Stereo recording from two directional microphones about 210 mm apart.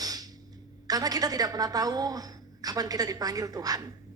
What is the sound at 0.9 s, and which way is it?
A woman's voice, 15° right (ahead or behind).